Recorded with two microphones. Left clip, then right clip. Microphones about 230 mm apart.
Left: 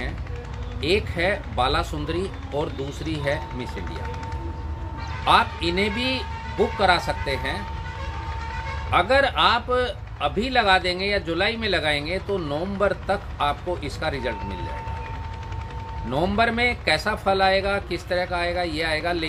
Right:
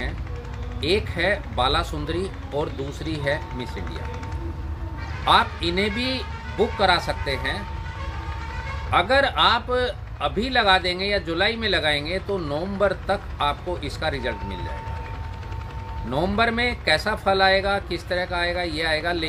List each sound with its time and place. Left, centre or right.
0.7 s speech: centre
5.2 s speech: centre
8.9 s speech: centre
16.1 s speech: centre